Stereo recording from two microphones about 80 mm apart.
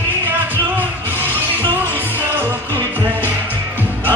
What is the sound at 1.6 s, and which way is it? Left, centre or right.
Music, left.